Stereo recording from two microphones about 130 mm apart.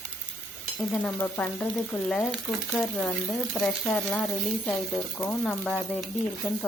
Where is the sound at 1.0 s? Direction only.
15° left (ahead or behind).